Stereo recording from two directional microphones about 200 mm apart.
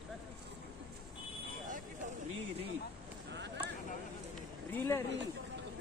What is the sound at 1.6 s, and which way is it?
Vehicle, 40° right (ahead or behind).